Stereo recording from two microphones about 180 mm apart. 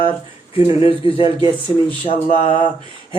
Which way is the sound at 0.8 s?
30° left (ahead or behind).